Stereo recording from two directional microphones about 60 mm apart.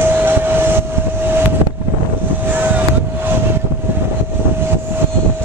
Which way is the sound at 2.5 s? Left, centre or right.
Right.